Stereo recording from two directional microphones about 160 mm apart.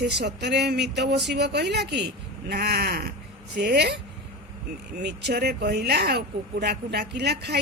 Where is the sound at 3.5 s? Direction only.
90° right.